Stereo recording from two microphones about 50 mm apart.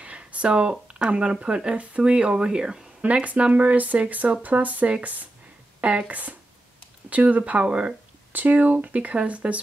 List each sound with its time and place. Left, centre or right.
0.0 s speech: right
3.0 s speech: right
8.3 s speech: right